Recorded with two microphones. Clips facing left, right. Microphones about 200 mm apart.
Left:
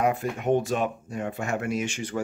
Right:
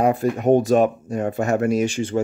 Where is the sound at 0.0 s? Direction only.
35° right (ahead or behind).